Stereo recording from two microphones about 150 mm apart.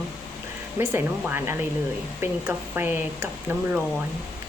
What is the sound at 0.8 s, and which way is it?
Speech, 15° right (ahead or behind).